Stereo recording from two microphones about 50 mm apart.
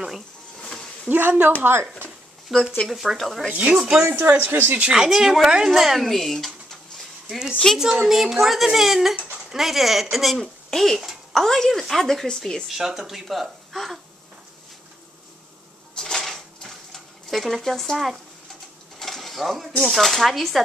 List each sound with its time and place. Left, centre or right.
1.0 s speech: right
1.6 s speech: right
2.5 s a woman's voice: centre
4.1 s speech: right
4.9 s speech: centre
5.7 s bird: centre
7.8 s a woman's voice: centre
12.6 s speech: centre
15.9 s dishes: centre
19.9 s a woman's voice: centre